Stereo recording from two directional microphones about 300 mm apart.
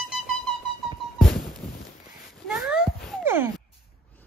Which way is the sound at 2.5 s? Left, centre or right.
Centre.